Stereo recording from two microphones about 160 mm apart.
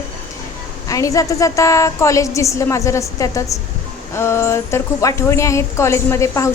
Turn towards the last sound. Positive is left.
turn(degrees=20)  # may be behind; listen again after turning